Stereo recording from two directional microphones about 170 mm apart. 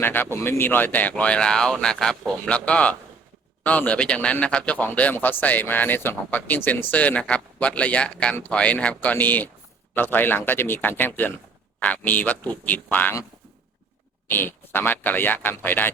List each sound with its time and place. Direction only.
0.0 s a man's voice: 10° left (ahead or behind)
14.3 s a man's voice: 10° left (ahead or behind)